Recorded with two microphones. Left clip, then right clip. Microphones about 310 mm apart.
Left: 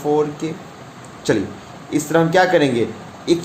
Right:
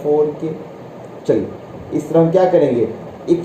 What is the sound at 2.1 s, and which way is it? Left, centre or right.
Speech, centre.